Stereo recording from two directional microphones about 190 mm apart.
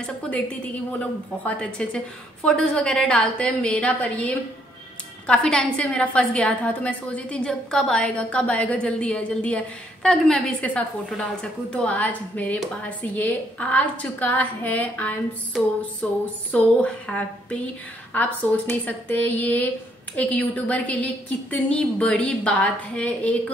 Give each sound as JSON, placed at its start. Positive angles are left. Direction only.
{"t": 0.0, "sound": "a woman's voice", "side_deg": 5}